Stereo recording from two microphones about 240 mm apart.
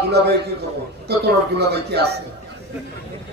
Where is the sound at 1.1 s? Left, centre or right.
Right.